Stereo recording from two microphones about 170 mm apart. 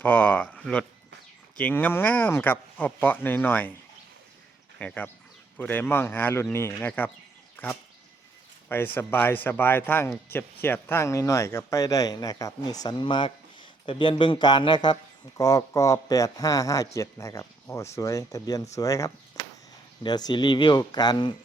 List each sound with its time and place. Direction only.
0.0 s speech: 10° left (ahead or behind)
4.8 s speech: 10° left (ahead or behind)
7.5 s a sound: 10° left (ahead or behind)
8.7 s speech: 10° left (ahead or behind)